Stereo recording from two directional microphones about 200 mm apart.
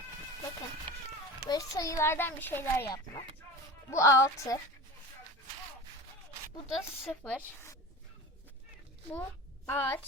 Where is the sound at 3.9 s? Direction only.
15° left (ahead or behind).